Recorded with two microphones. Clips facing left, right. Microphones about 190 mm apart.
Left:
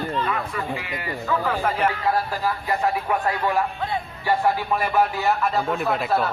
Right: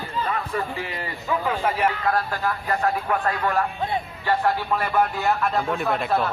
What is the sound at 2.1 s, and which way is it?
Speech, 10° left (ahead or behind).